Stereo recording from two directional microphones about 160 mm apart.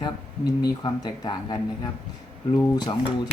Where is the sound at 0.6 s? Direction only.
25° left (ahead or behind).